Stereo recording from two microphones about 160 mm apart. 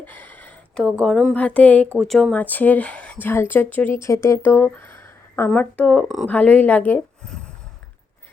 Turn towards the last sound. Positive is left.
turn(degrees=5)  # may be behind; listen again after turning